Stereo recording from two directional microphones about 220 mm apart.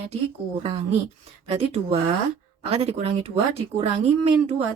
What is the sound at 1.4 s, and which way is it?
Speech, 25° right (ahead or behind).